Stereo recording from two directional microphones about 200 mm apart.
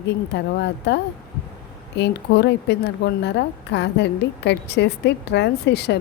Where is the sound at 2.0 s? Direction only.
60° left (ahead or behind).